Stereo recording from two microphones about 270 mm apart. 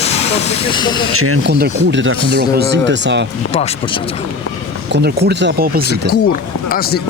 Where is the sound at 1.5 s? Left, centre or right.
Right.